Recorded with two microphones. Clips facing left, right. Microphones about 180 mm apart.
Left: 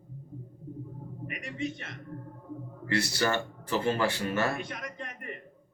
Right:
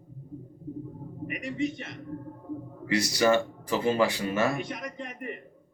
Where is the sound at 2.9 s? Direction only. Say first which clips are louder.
Right 5 dB; 15° right (ahead or behind).